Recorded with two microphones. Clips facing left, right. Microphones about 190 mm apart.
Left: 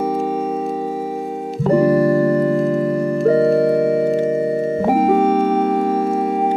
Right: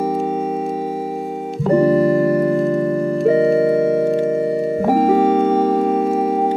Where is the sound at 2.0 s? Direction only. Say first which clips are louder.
Even; 20° right (ahead or behind).